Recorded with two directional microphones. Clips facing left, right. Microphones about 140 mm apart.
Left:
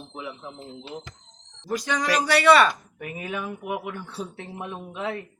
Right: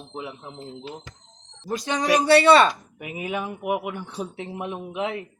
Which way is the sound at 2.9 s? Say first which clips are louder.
Right 3 dB; 15° right (ahead or behind).